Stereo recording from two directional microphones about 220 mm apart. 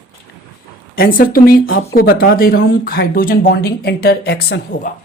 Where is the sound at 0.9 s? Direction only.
40° left (ahead or behind).